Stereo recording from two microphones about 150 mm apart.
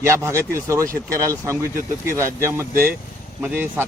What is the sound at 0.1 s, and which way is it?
Speech, 20° right (ahead or behind).